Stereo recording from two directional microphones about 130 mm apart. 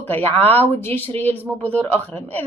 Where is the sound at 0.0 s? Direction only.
15° left (ahead or behind).